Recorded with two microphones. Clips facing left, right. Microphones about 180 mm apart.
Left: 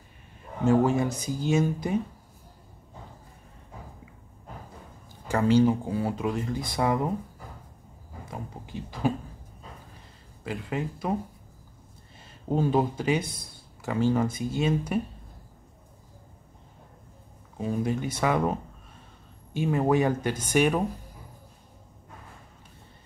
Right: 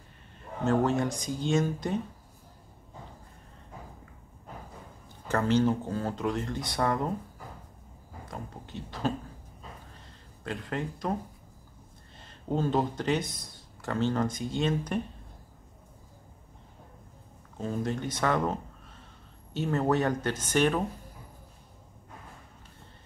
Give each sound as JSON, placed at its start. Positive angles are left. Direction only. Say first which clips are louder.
{"t": 0.7, "sound": "speech", "louder": "left 4 dB", "side_deg": 10}
{"t": 5.3, "sound": "speech", "louder": "left 4 dB", "side_deg": 10}
{"t": 8.3, "sound": "speech", "louder": "left 2 dB", "side_deg": 10}
{"t": 10.4, "sound": "speech", "louder": "left 2 dB", "side_deg": 5}
{"t": 12.2, "sound": "speech", "louder": "left 3 dB", "side_deg": 10}
{"t": 17.6, "sound": "speech", "louder": "left 3 dB", "side_deg": 10}